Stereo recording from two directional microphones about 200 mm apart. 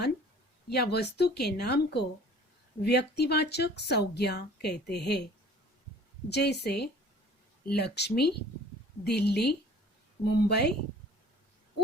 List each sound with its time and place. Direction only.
0.7 s speech: 55° left (ahead or behind)
6.3 s speech: 55° left (ahead or behind)